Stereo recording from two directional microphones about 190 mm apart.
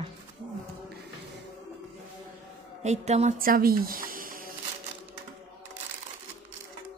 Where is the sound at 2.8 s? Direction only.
35° right (ahead or behind).